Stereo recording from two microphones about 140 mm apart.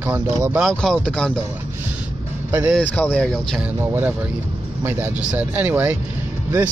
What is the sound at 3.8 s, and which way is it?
Speech, 15° right (ahead or behind).